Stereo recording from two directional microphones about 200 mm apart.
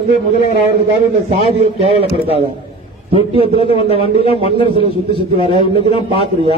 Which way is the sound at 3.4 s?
30° left (ahead or behind).